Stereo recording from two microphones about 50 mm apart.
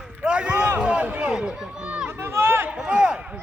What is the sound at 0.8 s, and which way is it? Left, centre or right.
Speech, centre.